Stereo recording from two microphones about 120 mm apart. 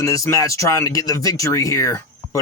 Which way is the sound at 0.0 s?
25° left (ahead or behind).